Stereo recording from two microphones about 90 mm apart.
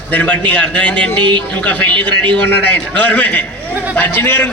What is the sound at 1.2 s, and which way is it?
Speech, 60° right (ahead or behind).